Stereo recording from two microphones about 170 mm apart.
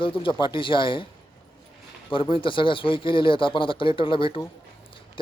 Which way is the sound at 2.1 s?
30° left (ahead or behind).